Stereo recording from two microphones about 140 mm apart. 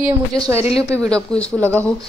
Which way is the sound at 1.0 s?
5° left (ahead or behind).